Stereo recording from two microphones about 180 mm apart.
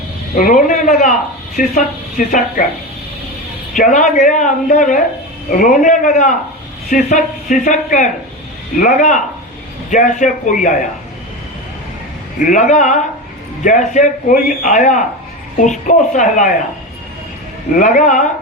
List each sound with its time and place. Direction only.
0.3 s a sound: 45° left (ahead or behind)
1.5 s a man's voice: 50° left (ahead or behind)
3.8 s a man's voice: 45° left (ahead or behind)
12.4 s a man's voice: 45° left (ahead or behind)
17.7 s a man's voice: 45° left (ahead or behind)